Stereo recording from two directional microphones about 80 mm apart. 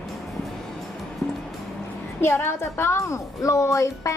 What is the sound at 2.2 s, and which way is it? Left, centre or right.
Speech, left.